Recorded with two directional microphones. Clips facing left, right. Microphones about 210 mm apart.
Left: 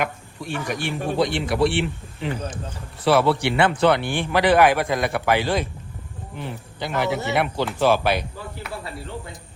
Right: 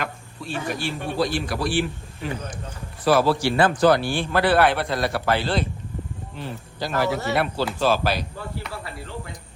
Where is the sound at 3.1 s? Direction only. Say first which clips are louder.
Left 1 dB; 65° left (ahead or behind).